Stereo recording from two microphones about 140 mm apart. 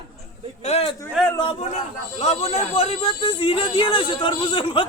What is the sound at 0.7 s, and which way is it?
Speech, 45° left (ahead or behind).